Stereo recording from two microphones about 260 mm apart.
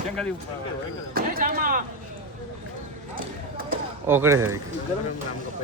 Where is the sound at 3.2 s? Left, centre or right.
Right.